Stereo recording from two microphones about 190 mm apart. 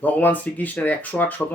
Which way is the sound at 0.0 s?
10° left (ahead or behind).